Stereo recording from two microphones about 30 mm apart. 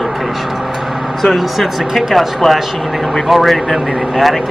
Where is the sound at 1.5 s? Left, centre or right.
Centre.